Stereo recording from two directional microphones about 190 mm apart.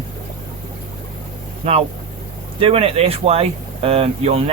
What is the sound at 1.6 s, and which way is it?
Speech, 30° right (ahead or behind).